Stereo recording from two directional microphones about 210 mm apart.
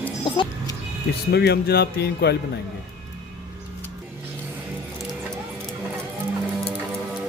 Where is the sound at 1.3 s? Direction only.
50° left (ahead or behind).